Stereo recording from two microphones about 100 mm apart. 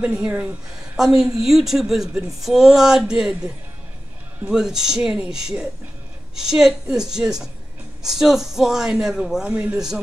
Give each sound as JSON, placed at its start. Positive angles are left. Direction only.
{"t": 0.0, "sound": "a woman's voice", "side_deg": -15}